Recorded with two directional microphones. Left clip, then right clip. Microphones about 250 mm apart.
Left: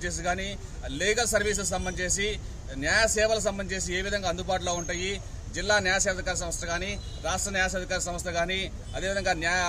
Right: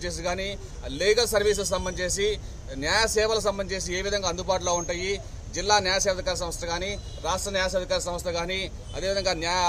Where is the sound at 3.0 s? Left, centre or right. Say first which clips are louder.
Even; centre.